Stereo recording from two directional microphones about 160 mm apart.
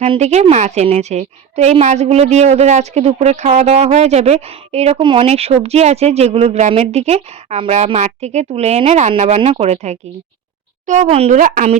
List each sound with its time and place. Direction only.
0.0 s a woman's voice: 45° right (ahead or behind)
11.3 s a woman's voice: 60° right (ahead or behind)